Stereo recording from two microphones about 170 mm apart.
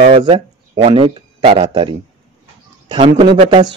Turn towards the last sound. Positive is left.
turn(degrees=-30)  # may be behind; listen again after turning